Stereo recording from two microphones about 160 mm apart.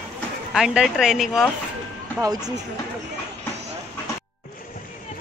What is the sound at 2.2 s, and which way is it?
Speech, 25° right (ahead or behind).